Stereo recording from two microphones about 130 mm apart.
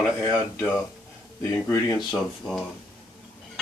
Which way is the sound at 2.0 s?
Centre (ahead or behind).